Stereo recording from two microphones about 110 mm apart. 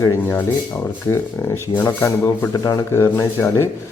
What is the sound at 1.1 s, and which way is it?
Speech, 25° left (ahead or behind).